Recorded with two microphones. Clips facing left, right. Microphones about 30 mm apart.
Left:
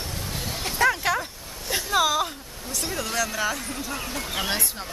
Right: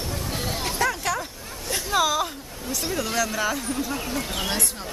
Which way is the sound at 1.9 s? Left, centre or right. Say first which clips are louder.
Even; centre.